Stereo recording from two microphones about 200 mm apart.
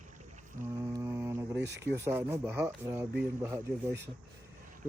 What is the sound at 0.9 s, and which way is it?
Speech, 15° right (ahead or behind).